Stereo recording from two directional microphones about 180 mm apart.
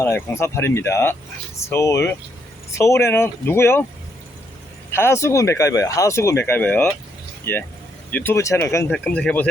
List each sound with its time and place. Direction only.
0.0 s speech: 15° left (ahead or behind)
4.9 s speech: 15° left (ahead or behind)